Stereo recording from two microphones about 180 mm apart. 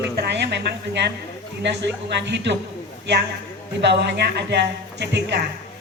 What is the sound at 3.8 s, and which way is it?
A man's voice, 70° right (ahead or behind).